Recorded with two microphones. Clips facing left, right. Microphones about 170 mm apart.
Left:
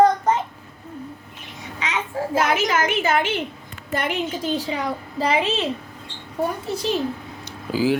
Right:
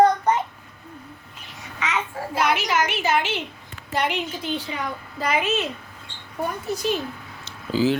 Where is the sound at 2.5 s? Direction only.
45° left (ahead or behind); by 5.6 s 30° left (ahead or behind).